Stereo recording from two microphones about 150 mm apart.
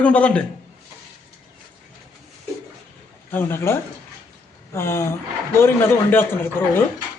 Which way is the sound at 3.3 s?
15° left (ahead or behind).